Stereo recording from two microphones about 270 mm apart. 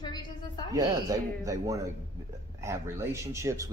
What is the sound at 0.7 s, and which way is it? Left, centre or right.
Speech, centre.